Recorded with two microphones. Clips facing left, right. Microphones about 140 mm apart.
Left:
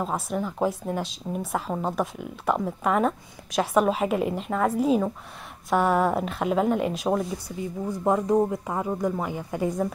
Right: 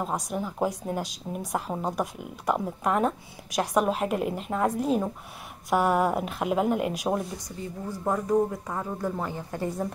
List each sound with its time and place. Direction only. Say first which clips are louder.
0.0 s a woman's voice: left 2 dB; 5° right (ahead or behind)
8.0 s a woman's voice: left 3 dB; 20° left (ahead or behind)